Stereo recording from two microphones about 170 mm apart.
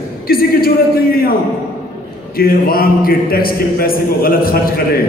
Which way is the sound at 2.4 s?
60° left (ahead or behind).